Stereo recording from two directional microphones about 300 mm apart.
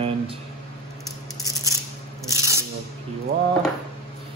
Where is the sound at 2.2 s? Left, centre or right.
Centre.